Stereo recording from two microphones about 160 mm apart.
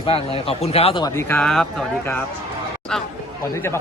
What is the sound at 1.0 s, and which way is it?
Speech, 15° left (ahead or behind).